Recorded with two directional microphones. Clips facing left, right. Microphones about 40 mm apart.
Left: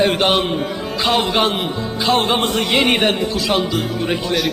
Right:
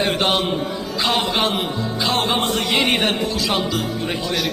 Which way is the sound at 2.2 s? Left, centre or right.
Left.